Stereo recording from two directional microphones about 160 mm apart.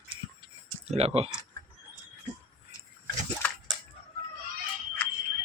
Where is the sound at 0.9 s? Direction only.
40° right (ahead or behind).